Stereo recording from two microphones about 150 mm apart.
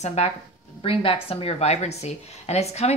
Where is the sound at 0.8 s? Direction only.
35° left (ahead or behind).